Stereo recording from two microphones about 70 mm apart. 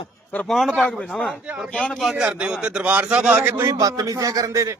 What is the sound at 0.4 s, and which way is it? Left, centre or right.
Speech, centre.